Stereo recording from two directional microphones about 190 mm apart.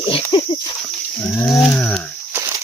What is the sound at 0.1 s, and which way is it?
Pig, 25° left (ahead or behind).